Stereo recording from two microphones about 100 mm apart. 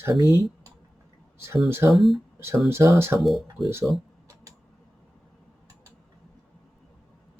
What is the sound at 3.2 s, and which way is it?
Speech, centre (ahead or behind).